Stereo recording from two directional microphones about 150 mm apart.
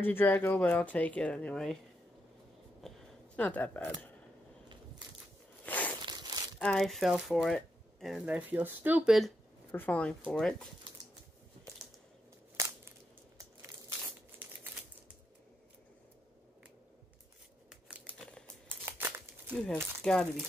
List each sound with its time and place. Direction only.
0.0 s speech: 15° left (ahead or behind)
3.3 s speech: 10° left (ahead or behind)
5.7 s a sound: 10° left (ahead or behind)
6.0 s crumpling: 25° right (ahead or behind)
6.6 s speech: centre (ahead or behind)
8.3 s speech: 10° right (ahead or behind)
9.7 s speech: 10° left (ahead or behind)
12.5 s crushing: 15° right (ahead or behind)
13.4 s crumpling: 20° right (ahead or behind)
17.6 s scissors: 10° right (ahead or behind)
18.7 s crumpling: 15° right (ahead or behind)
19.5 s speech: 5° left (ahead or behind)